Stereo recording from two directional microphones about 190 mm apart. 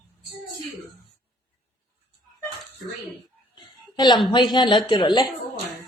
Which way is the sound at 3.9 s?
20° left (ahead or behind).